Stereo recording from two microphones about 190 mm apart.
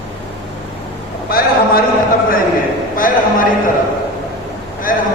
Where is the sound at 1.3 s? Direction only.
50° left (ahead or behind).